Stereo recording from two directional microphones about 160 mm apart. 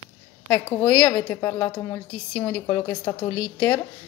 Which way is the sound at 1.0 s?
15° left (ahead or behind).